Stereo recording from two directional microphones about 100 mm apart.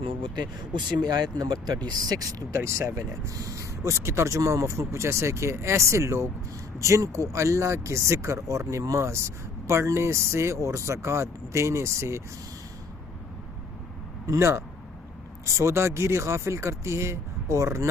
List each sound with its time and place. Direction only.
0.0 s speech: 50° right (ahead or behind); by 12.2 s 30° right (ahead or behind)
14.3 s speech: 25° right (ahead or behind)